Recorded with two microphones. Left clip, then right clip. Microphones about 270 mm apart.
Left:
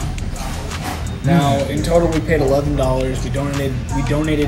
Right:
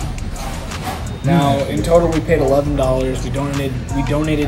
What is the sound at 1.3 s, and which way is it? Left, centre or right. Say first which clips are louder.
Speech: right 1 dB; right.